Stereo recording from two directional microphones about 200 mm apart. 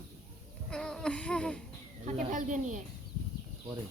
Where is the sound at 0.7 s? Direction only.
5° left (ahead or behind).